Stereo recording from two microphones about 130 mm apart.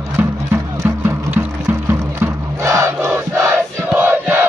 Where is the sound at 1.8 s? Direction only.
20° right (ahead or behind).